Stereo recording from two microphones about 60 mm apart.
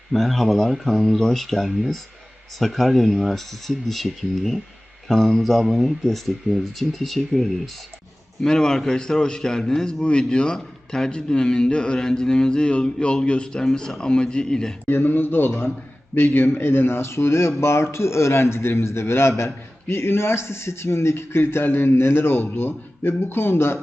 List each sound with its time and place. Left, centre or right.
0.1 s a man's voice: centre
14.8 s a man's voice: left